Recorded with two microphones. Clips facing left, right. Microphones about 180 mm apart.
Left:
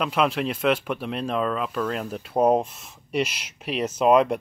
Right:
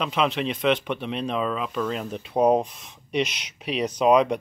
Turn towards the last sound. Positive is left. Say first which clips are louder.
# even
turn(degrees=5)  # may be behind; listen again after turning